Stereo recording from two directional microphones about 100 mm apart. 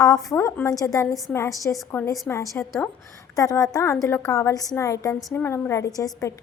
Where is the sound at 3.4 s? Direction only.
35° left (ahead or behind).